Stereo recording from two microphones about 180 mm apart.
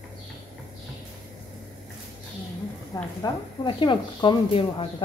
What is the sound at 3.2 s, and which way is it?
Speech, 25° left (ahead or behind).